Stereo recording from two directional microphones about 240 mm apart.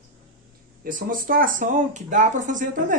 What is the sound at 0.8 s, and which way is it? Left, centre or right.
Speech, right.